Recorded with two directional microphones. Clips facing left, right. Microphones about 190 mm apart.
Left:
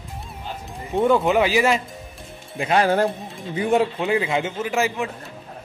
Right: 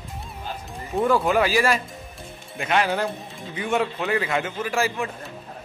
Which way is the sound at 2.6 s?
35° left (ahead or behind).